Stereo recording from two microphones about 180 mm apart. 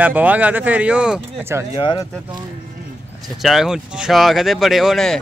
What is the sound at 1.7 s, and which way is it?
Speech, 25° left (ahead or behind).